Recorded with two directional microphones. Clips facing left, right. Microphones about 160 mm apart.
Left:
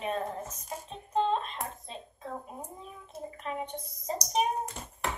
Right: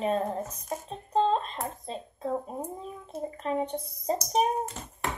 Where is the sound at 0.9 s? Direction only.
35° right (ahead or behind).